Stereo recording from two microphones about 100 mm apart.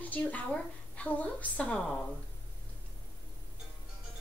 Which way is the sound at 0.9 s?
15° left (ahead or behind).